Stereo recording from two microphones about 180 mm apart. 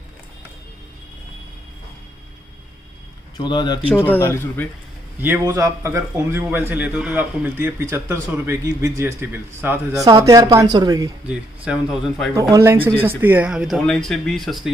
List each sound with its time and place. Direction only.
3.3 s speech: 25° left (ahead or behind)
3.9 s a man's voice: 10° left (ahead or behind)
5.2 s a man's voice: 15° right (ahead or behind)
11.2 s speech: 5° right (ahead or behind)
12.4 s a man's voice: 20° right (ahead or behind); by 14.7 s centre (ahead or behind)